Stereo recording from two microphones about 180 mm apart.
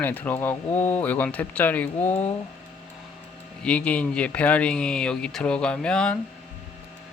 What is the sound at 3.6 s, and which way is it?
Speech, 5° left (ahead or behind).